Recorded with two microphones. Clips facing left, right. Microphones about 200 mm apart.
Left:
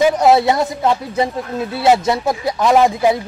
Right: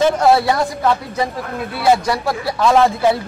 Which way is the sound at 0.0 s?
20° left (ahead or behind).